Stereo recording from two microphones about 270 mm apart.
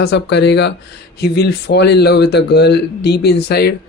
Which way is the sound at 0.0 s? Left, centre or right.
Left.